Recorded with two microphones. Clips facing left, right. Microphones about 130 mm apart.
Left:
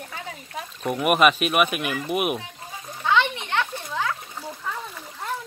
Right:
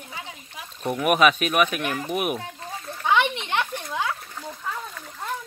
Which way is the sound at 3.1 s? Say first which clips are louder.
Even; 15° right (ahead or behind).